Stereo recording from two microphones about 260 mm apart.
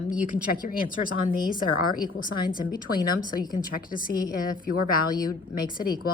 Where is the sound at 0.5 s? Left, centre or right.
Left.